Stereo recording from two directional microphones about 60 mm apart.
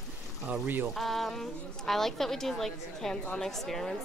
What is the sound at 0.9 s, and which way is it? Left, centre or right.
A woman's voice, centre.